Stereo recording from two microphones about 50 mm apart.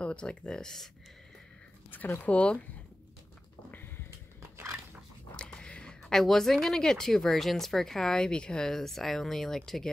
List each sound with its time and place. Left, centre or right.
0.0 s speech: left
1.9 s speech: left
2.2 s speech: left
5.3 s speech: left